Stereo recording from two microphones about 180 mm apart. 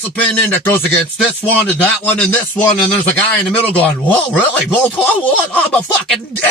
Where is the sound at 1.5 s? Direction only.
10° left (ahead or behind).